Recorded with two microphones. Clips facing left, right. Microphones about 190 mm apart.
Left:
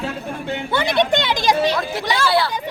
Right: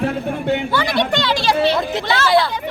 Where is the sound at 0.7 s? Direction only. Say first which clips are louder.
Left 1 dB; 20° left (ahead or behind).